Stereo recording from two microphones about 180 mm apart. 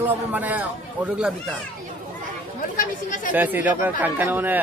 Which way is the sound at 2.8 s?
45° left (ahead or behind).